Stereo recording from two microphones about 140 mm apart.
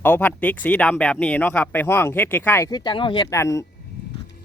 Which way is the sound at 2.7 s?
35° left (ahead or behind).